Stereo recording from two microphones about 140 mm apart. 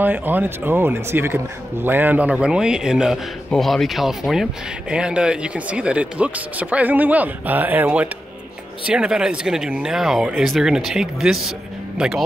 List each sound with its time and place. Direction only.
0.0 s speech: 15° right (ahead or behind)